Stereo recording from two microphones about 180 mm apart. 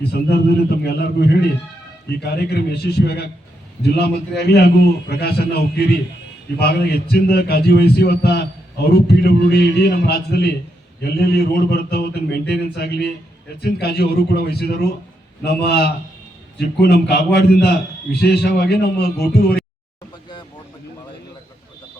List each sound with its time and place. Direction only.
0.1 s a man's voice: 65° left (ahead or behind)